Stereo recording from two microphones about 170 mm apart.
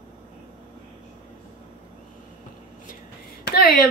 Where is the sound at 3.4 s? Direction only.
65° left (ahead or behind).